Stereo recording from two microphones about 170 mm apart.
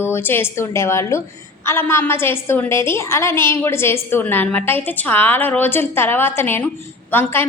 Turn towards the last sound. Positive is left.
turn(degrees=10)  # may be behind; listen again after turning